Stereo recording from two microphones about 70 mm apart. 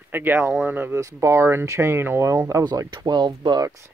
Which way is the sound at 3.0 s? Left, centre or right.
Right.